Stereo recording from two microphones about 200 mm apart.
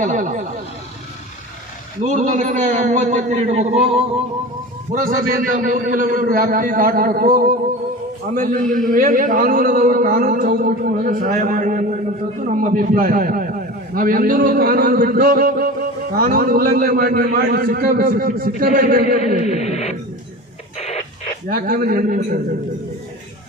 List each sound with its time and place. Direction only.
0.0 s a man's voice: 40° right (ahead or behind)
2.0 s a man's voice: 40° right (ahead or behind)
4.9 s a man's voice: 45° right (ahead or behind)
19.5 s a sound: 35° left (ahead or behind)
20.7 s printer: 30° left (ahead or behind)
21.5 s a man's voice: 45° right (ahead or behind)